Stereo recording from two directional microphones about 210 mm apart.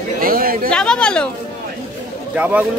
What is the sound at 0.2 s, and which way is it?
Chatter, 45° right (ahead or behind).